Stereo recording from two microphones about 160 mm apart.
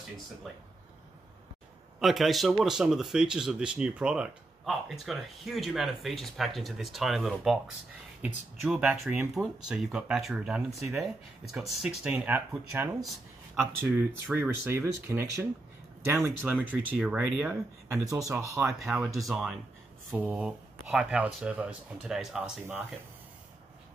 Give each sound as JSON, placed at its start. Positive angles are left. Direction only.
{"t": 2.0, "sound": "speech", "side_deg": 0}
{"t": 14.3, "sound": "speech", "side_deg": -15}
{"t": 18.0, "sound": "speech", "side_deg": -20}
{"t": 19.1, "sound": "speech", "side_deg": 0}